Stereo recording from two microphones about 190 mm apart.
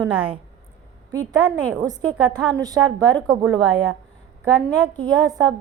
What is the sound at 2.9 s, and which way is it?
Speech, 5° left (ahead or behind).